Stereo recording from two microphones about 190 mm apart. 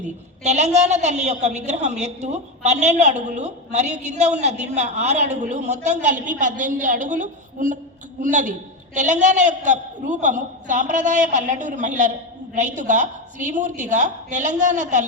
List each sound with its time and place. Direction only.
0.0 s a woman's voice: 35° right (ahead or behind)